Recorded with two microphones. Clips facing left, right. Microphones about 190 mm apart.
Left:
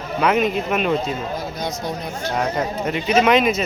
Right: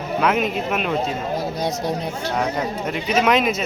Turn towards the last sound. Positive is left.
turn(degrees=0)  # may be behind; listen again after turning